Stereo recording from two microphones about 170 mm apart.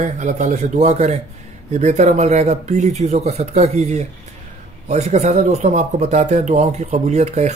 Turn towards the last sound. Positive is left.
turn(degrees=-40)  # may be behind; listen again after turning